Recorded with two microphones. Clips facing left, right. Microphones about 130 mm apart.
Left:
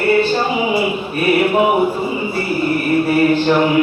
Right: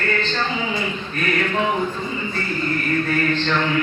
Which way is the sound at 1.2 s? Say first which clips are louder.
Left 8 dB; 10° left (ahead or behind).